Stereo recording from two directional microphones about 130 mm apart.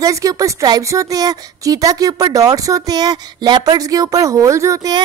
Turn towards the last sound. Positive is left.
turn(degrees=-30)  # may be behind; listen again after turning